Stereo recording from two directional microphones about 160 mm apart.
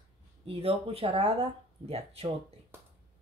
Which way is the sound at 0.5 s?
35° right (ahead or behind).